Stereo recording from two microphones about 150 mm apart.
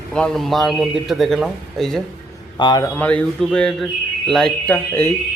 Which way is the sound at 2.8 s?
10° left (ahead or behind).